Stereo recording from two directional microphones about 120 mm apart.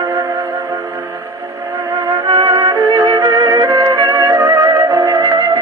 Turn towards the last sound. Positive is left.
turn(degrees=-30)  # may be behind; listen again after turning